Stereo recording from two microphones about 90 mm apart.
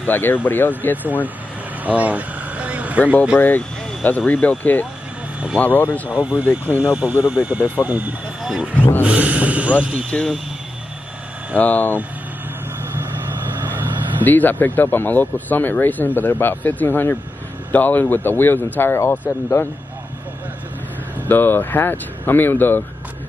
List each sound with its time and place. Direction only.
0.0 s speech: 20° left (ahead or behind)
1.9 s vehicle: 15° right (ahead or behind)
3.3 s speech: 20° left (ahead or behind)
6.0 s speech: 10° right (ahead or behind)
8.4 s speech: 5° right (ahead or behind)
9.0 s speech: 15° right (ahead or behind)
10.1 s speech: 5° left (ahead or behind)
11.5 s speech: 20° left (ahead or behind)
14.2 s speech: 20° left (ahead or behind)
21.3 s speech: 20° left (ahead or behind)